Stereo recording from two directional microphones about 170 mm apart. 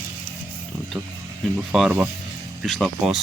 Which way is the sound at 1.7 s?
5° right (ahead or behind).